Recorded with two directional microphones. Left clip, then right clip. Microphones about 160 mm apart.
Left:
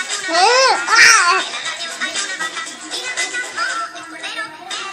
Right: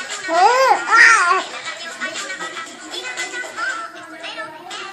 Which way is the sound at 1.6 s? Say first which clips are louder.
Left 4 dB; 40° left (ahead or behind).